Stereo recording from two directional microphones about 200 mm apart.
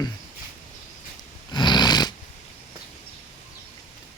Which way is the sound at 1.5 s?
20° left (ahead or behind).